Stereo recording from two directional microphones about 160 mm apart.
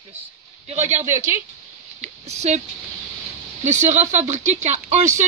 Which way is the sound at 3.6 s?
45° right (ahead or behind).